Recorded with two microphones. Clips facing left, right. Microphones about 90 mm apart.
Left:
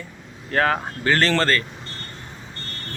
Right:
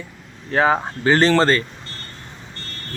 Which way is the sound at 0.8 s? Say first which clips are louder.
Right 4 dB; 25° right (ahead or behind).